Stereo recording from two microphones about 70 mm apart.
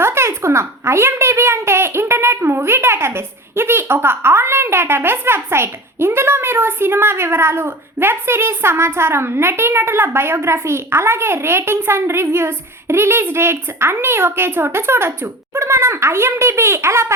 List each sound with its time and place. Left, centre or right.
0.0 s a woman's voice: right